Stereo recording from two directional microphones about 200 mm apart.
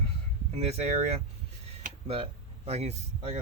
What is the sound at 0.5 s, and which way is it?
Speech, 30° right (ahead or behind).